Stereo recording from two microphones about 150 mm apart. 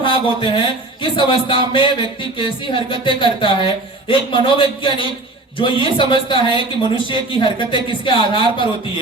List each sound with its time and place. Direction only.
0.0 s a woman's voice: 35° left (ahead or behind)